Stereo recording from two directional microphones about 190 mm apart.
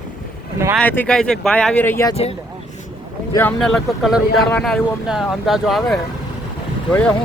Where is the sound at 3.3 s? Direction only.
5° left (ahead or behind).